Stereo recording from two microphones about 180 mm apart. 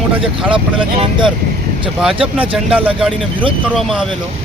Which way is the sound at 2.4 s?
5° right (ahead or behind).